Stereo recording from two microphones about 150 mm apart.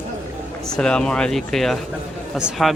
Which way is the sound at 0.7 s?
5° left (ahead or behind).